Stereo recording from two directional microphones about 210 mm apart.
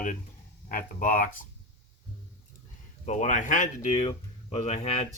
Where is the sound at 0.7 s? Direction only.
40° left (ahead or behind).